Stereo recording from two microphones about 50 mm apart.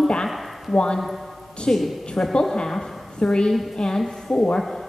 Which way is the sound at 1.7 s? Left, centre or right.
Centre.